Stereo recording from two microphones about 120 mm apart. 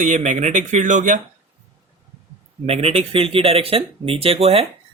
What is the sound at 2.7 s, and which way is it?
Speech, 55° right (ahead or behind).